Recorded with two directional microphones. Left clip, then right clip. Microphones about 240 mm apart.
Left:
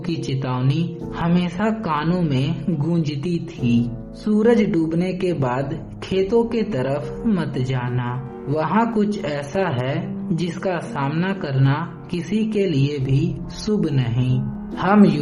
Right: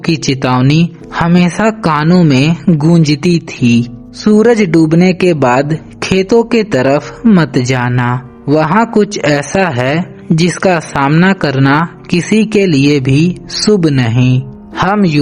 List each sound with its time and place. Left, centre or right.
0.0 s a man's voice: right